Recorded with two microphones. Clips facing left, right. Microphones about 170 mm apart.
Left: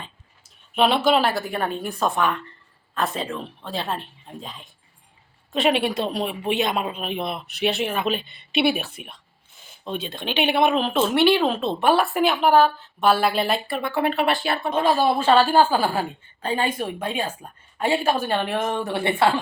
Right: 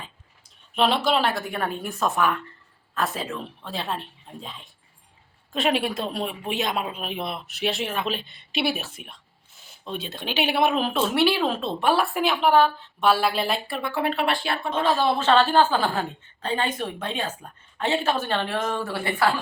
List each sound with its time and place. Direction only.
0.8 s speech: centre (ahead or behind); by 19.3 s 25° left (ahead or behind)